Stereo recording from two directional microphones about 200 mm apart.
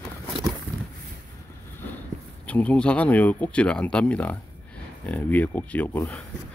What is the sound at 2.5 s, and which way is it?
Speech, 5° left (ahead or behind).